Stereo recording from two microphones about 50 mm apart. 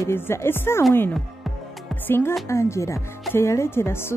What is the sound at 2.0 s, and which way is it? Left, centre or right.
Music, left.